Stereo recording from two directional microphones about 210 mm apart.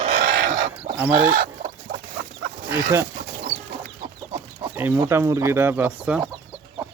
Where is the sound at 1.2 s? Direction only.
45° right (ahead or behind).